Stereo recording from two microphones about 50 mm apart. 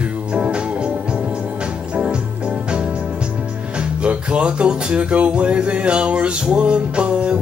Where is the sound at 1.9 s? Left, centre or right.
Right.